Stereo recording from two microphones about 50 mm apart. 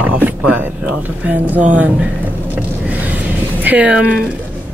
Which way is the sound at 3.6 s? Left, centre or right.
Right.